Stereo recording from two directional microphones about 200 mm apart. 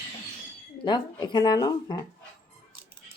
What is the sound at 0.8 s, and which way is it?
Speech, 20° left (ahead or behind).